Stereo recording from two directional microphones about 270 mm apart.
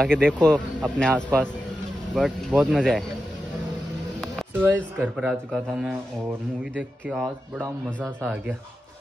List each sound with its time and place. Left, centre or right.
0.0 s speech: centre
4.2 s a sound: centre
4.6 s speech: centre